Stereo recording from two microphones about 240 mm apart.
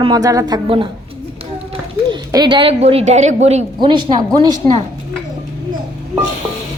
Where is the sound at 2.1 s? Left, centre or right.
Centre.